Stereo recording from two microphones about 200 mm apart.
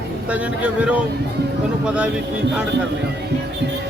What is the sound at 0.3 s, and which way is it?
Speech, 5° right (ahead or behind).